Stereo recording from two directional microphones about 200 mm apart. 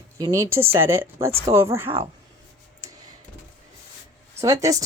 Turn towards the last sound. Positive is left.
turn(degrees=-15)  # may be behind; listen again after turning